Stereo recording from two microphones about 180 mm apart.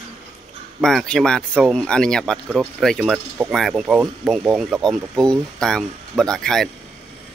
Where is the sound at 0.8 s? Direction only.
Centre (ahead or behind).